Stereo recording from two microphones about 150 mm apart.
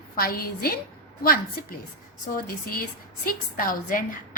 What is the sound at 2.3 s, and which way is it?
A woman's voice, 75° left (ahead or behind).